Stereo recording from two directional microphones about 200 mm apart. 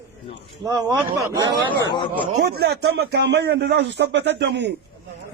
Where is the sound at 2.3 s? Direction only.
50° right (ahead or behind).